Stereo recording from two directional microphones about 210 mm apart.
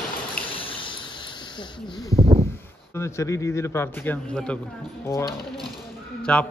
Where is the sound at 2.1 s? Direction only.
30° right (ahead or behind).